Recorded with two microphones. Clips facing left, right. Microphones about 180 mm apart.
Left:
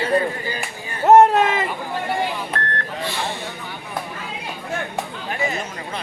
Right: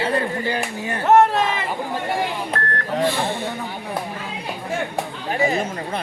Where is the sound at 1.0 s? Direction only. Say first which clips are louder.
Left 3 dB; 40° left (ahead or behind).